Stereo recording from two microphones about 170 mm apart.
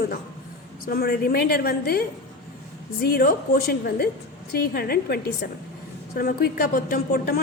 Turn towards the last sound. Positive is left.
turn(degrees=60)  # may be behind; listen again after turning